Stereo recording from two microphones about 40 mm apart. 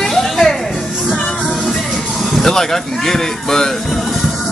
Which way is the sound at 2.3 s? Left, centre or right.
Centre.